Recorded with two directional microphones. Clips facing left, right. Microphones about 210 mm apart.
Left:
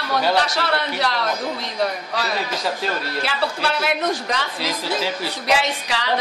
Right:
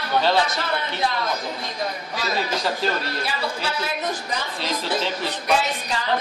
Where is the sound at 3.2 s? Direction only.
70° left (ahead or behind).